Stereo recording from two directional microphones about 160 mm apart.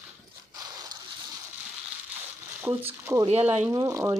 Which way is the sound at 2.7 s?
15° right (ahead or behind).